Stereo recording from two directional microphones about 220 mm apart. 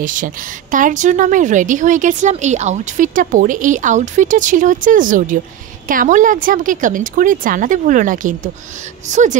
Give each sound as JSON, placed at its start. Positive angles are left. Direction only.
{"t": 0.0, "sound": "a woman's voice", "side_deg": -35}